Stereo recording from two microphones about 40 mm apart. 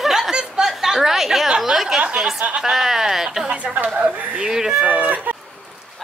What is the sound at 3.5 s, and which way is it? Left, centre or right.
Speech, right.